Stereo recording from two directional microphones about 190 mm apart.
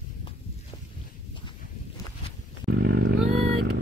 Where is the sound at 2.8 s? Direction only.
65° right (ahead or behind).